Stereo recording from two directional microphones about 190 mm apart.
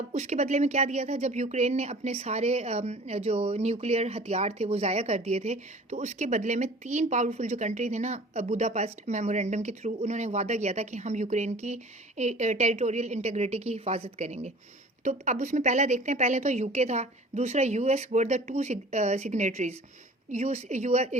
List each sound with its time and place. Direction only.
0.1 s speech: 40° right (ahead or behind)